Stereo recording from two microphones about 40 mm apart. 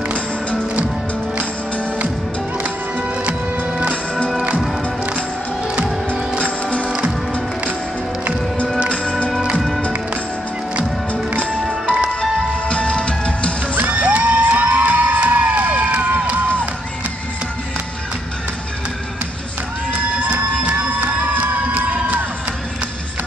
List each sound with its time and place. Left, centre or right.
6.4 s music: left
11.8 s music: right
12.2 s music: left
13.7 s music: right
15.3 s cheering: right
21.2 s music: right